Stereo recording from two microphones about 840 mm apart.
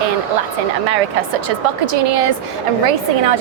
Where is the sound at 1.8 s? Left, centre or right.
Right.